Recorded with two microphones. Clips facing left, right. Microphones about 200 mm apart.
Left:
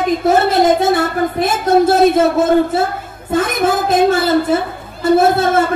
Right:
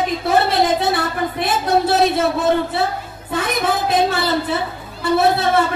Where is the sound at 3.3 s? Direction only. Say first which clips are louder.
Left 5 dB; 45° left (ahead or behind).